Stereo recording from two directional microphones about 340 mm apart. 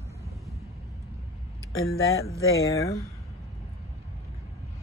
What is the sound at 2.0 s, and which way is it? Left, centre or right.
Speech, left.